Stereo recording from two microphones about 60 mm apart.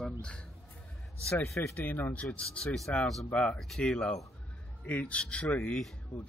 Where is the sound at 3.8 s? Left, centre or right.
Centre.